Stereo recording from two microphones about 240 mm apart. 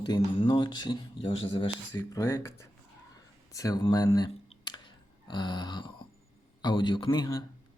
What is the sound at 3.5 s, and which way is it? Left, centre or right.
Clicking, centre.